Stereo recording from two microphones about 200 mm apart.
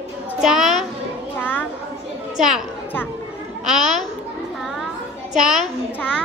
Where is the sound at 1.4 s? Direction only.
10° left (ahead or behind).